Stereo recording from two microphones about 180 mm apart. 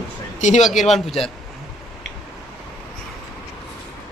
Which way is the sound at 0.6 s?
Centre (ahead or behind).